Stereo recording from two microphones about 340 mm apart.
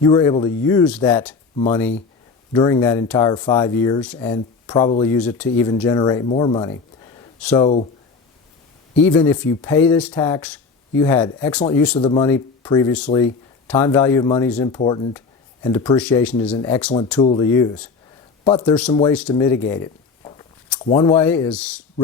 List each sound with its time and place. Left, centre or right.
0.0 s speech: centre
1.5 s speech: centre
9.0 s speech: centre
18.7 s speech: centre